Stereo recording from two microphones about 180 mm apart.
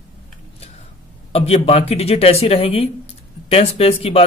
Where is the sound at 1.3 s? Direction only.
35° left (ahead or behind).